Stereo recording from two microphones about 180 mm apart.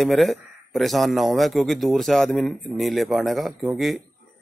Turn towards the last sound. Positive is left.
turn(degrees=0)  # may be behind; listen again after turning